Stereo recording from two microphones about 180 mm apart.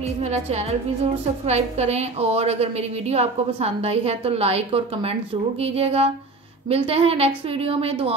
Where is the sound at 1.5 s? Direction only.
35° right (ahead or behind).